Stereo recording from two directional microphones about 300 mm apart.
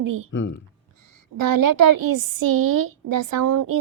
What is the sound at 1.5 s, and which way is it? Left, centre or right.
A woman's voice, right.